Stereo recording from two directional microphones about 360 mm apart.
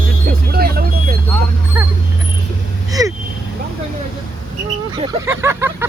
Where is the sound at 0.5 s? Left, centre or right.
Right.